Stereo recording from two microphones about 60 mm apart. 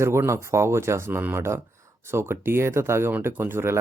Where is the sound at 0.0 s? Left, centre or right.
Right.